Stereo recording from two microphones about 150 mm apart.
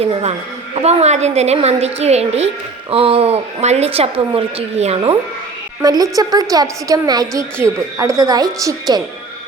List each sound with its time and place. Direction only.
0.0 s a woman's voice: 45° right (ahead or behind)
5.8 s a woman's voice: 25° right (ahead or behind)